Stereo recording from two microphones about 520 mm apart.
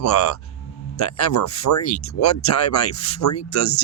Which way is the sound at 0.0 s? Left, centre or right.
Left.